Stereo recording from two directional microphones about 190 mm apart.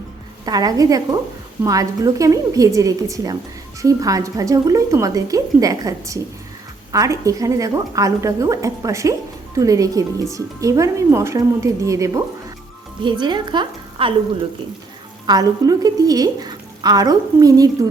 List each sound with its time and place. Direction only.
0.4 s a woman's voice: 20° right (ahead or behind)
15.3 s a woman's voice: 20° right (ahead or behind)